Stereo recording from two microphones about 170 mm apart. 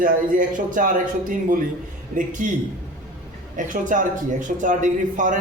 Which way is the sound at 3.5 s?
50° right (ahead or behind).